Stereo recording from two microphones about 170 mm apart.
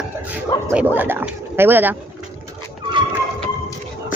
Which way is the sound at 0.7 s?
10° right (ahead or behind).